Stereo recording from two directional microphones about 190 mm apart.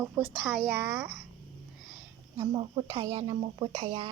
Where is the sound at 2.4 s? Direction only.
30° right (ahead or behind).